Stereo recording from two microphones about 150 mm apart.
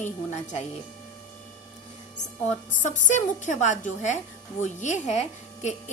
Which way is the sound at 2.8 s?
55° left (ahead or behind).